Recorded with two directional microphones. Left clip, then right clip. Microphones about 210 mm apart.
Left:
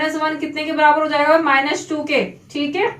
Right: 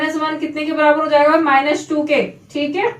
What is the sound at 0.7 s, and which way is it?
Speech, 5° right (ahead or behind).